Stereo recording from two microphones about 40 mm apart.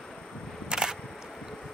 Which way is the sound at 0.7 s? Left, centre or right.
Centre.